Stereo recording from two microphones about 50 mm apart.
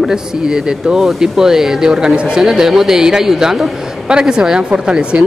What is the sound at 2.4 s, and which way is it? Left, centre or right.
Speech, centre.